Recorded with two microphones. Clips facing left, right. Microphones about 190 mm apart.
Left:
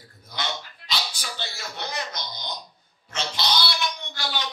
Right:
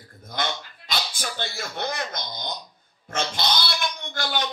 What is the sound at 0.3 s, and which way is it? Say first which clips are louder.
Speech: right 3 dB; 50° right (ahead or behind).